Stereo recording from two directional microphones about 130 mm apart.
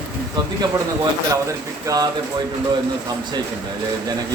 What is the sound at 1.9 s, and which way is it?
Speech, 30° right (ahead or behind).